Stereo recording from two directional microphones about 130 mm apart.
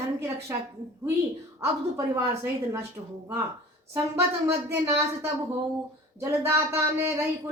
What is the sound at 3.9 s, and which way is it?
Speech, 20° right (ahead or behind).